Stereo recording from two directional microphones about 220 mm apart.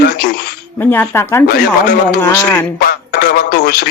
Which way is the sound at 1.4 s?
45° left (ahead or behind).